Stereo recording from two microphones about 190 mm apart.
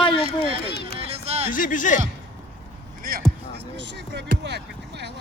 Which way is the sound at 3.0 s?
50° right (ahead or behind).